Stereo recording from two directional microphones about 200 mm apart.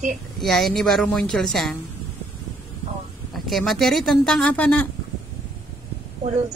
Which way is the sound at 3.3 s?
Centre (ahead or behind).